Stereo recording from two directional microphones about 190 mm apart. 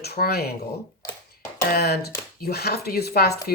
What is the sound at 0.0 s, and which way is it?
Speech, 55° left (ahead or behind).